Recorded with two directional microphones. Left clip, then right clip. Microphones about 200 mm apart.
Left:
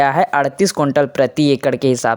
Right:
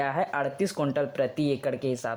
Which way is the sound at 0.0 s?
35° left (ahead or behind).